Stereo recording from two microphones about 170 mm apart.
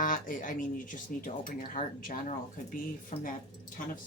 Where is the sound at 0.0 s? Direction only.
55° left (ahead or behind).